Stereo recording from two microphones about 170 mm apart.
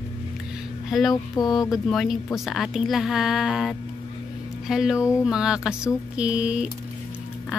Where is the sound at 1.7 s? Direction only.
Centre (ahead or behind).